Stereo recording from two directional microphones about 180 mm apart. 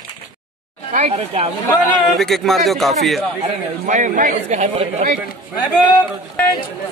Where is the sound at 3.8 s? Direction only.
45° right (ahead or behind).